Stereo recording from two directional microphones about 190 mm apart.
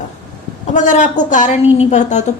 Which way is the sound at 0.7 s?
40° left (ahead or behind).